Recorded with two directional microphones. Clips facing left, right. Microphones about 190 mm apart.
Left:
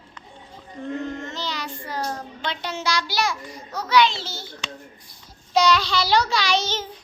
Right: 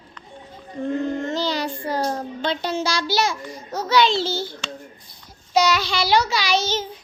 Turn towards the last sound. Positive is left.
turn(degrees=-5)  # may be behind; listen again after turning